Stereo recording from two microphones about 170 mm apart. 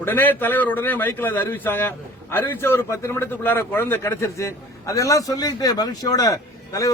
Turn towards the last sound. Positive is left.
turn(degrees=20)  # may be behind; listen again after turning